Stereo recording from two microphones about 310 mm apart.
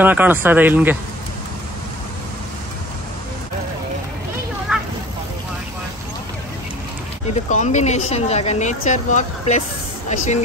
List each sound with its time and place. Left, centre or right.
0.0 s speech: centre
4.7 s a sound: centre
7.4 s speech: left